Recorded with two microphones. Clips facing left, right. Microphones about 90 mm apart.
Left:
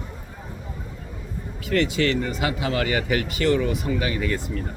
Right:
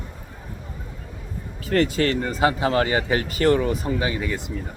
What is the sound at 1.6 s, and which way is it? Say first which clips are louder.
Speech: right 1 dB; 40° right (ahead or behind).